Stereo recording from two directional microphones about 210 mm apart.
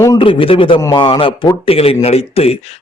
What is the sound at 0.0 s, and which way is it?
A man's voice, 20° left (ahead or behind).